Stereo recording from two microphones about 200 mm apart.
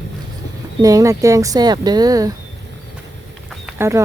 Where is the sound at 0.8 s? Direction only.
15° right (ahead or behind).